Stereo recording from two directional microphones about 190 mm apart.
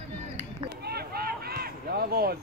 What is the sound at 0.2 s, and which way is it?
Run, 35° right (ahead or behind).